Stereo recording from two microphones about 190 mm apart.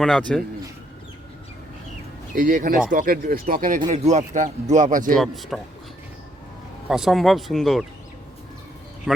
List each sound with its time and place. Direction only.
0.0 s speech: 5° left (ahead or behind)
2.3 s speech: 45° right (ahead or behind)
5.1 s speech: centre (ahead or behind)
6.8 s speech: 5° right (ahead or behind)
9.1 s speech: centre (ahead or behind)